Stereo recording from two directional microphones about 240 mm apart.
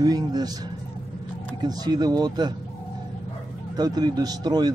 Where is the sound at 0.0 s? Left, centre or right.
Centre.